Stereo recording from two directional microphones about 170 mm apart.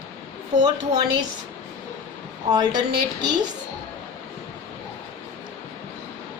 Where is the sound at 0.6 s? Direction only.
25° right (ahead or behind).